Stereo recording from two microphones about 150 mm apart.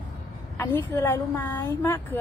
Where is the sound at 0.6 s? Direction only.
15° left (ahead or behind).